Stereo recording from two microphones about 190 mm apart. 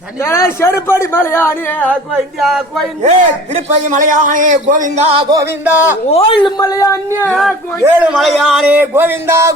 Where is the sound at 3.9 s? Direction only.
40° right (ahead or behind).